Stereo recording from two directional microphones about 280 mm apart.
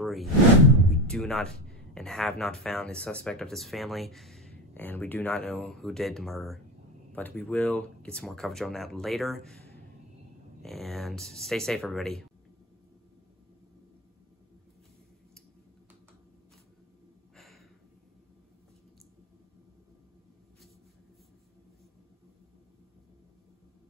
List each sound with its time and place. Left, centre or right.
0.0 s a sound: centre
1.0 s speech: centre
10.6 s speech: centre